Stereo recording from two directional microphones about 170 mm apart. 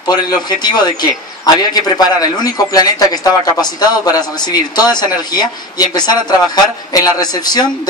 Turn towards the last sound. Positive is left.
turn(degrees=25)  # may be behind; listen again after turning